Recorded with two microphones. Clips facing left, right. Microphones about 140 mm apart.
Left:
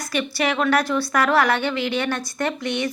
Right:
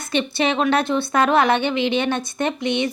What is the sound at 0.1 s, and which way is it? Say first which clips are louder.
Speech: right 3 dB; 25° right (ahead or behind).